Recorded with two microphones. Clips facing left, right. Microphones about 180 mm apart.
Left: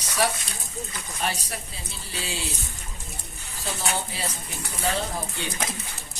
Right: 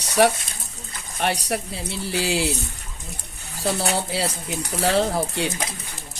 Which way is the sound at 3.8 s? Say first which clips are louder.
Right 6 dB; 75° right (ahead or behind).